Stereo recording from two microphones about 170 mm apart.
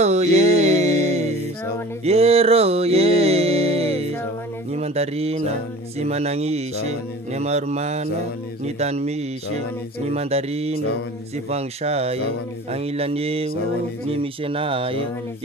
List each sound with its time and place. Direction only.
0.0 s music: 40° right (ahead or behind)
4.7 s speech: 35° right (ahead or behind)